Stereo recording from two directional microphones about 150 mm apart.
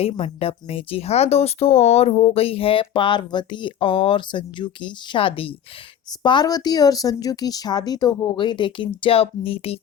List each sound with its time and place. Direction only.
0.0 s speech: 40° left (ahead or behind)